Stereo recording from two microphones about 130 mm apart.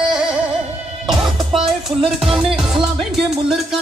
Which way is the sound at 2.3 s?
Centre (ahead or behind).